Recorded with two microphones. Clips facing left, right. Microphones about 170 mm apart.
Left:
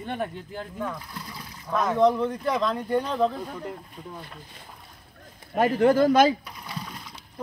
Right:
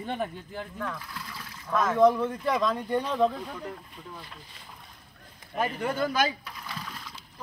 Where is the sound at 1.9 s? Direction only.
Centre (ahead or behind).